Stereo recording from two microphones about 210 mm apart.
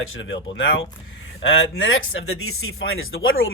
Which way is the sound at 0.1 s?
65° left (ahead or behind).